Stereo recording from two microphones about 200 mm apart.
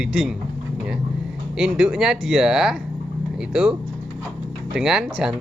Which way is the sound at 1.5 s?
5° right (ahead or behind).